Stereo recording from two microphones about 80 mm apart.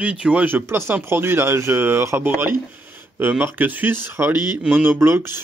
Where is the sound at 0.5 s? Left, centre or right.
Right.